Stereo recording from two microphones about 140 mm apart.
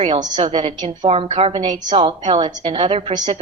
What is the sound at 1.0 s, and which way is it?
A woman's voice, 40° right (ahead or behind).